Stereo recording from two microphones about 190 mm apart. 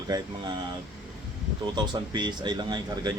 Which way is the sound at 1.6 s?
25° right (ahead or behind).